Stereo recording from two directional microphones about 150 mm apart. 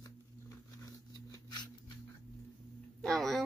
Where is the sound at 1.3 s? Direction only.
25° left (ahead or behind).